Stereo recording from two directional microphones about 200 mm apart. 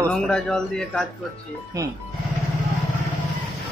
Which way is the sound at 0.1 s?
5° left (ahead or behind).